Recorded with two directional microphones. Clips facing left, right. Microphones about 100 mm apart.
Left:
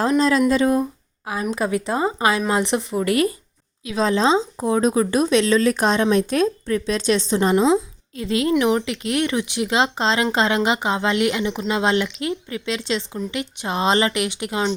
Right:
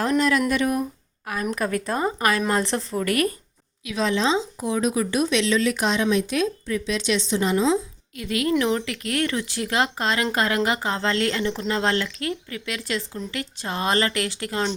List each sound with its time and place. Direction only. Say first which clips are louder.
0.2 s speech: left 4 dB; 25° left (ahead or behind)
3.8 s a woman's voice: left 4 dB; 35° left (ahead or behind); by 14.6 s 20° left (ahead or behind)